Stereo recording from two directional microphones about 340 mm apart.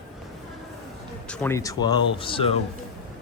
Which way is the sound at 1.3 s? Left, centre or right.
Centre.